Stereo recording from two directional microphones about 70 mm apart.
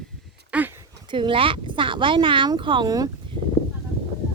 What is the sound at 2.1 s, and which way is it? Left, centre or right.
Speech, right.